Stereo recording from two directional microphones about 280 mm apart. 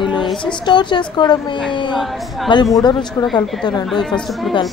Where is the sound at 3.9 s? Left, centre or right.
Centre.